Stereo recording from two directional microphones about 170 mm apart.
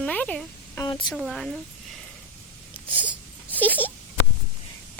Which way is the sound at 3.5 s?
10° left (ahead or behind).